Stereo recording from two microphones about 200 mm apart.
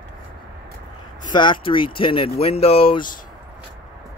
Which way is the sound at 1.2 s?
20° left (ahead or behind).